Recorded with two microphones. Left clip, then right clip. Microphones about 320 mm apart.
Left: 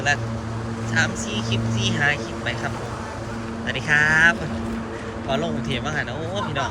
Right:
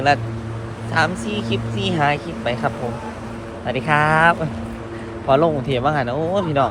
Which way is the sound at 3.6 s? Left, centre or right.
Centre.